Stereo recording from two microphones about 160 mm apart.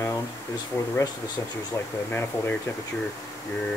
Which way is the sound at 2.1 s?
15° left (ahead or behind).